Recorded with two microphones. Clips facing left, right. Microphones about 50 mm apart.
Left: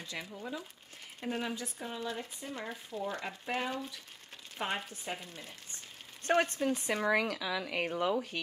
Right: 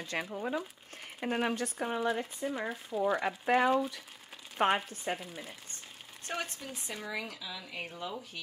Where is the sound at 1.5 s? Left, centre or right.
Right.